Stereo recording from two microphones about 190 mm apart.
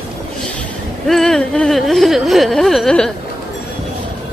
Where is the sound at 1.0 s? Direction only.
Centre (ahead or behind).